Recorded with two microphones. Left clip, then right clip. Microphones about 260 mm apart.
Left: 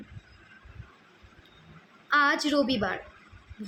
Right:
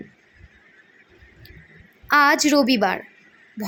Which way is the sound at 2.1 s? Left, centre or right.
Right.